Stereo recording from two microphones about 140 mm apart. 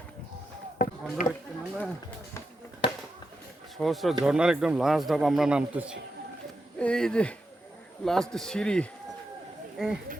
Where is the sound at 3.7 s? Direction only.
Centre (ahead or behind).